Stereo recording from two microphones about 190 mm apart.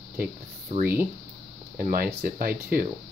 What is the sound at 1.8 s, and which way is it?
Speech, 50° right (ahead or behind).